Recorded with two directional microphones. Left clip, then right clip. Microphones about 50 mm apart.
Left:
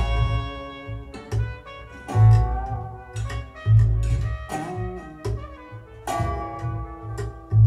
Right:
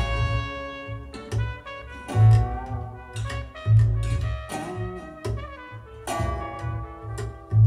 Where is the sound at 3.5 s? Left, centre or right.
Right.